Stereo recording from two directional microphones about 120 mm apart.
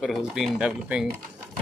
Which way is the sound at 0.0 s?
Centre (ahead or behind).